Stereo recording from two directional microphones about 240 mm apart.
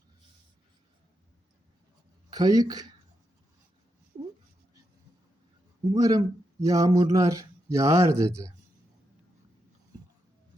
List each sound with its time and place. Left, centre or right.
2.3 s speech: centre
4.1 s a sound: centre
5.9 s speech: centre